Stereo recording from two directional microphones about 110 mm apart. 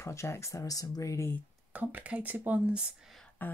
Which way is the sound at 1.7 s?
15° right (ahead or behind).